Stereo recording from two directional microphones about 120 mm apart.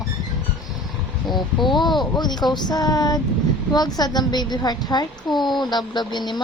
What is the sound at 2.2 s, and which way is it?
A woman's voice, 35° left (ahead or behind).